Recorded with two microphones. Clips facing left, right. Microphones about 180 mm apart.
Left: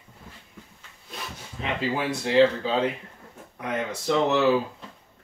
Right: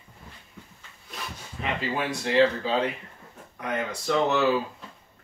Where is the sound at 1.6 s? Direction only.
25° left (ahead or behind).